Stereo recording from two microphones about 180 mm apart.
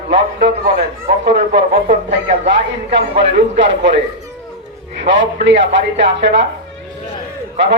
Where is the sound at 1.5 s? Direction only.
80° right.